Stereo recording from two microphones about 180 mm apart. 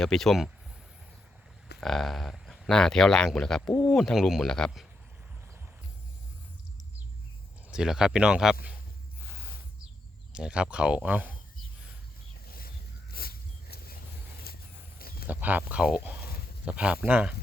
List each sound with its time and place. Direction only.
0.0 s speech: centre (ahead or behind)
1.8 s speech: centre (ahead or behind)
7.7 s speech: 5° right (ahead or behind)
10.3 s speech: 5° right (ahead or behind)
12.5 s vehicle: 55° left (ahead or behind)
15.3 s speech: 10° right (ahead or behind)